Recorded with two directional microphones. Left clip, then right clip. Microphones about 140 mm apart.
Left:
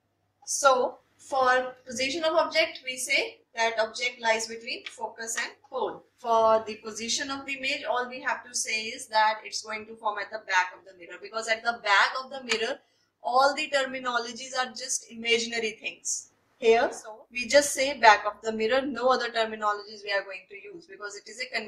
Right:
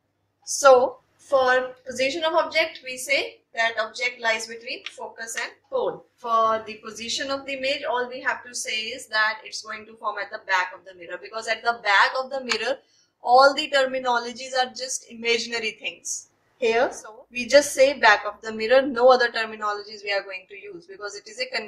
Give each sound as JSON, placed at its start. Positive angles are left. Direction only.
{"t": 1.4, "sound": "a woman's voice", "side_deg": -40}
{"t": 21.4, "sound": "a woman's voice", "side_deg": -45}